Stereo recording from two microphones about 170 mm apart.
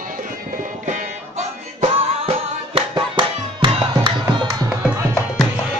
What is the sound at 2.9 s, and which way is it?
Music, 25° right (ahead or behind).